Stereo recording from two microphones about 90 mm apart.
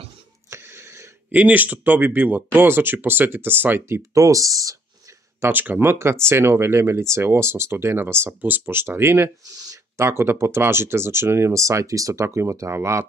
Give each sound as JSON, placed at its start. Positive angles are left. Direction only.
{"t": 0.5, "sound": "wheeze", "side_deg": -30}
{"t": 1.3, "sound": "speech", "side_deg": -20}
{"t": 4.1, "sound": "speech", "side_deg": -35}
{"t": 5.4, "sound": "speech", "side_deg": -20}
{"t": 9.4, "sound": "speech", "side_deg": -45}
{"t": 9.9, "sound": "speech", "side_deg": -30}